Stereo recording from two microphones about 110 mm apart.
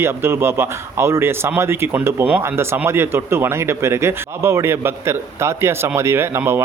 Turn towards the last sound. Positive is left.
turn(degrees=-25)  # may be behind; listen again after turning